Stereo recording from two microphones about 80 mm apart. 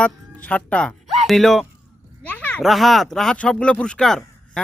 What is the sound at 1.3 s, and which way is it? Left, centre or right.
Speech, centre.